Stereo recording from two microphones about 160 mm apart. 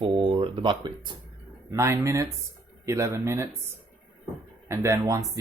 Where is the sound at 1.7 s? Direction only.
15° right (ahead or behind).